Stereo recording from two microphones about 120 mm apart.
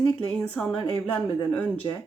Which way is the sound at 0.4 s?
10° left (ahead or behind).